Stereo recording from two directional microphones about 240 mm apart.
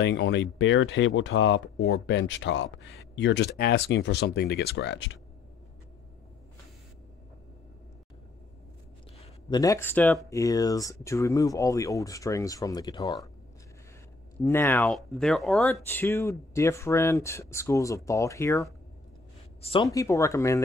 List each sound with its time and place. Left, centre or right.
0.0 s speech: left
9.2 s speech: centre
14.4 s speech: centre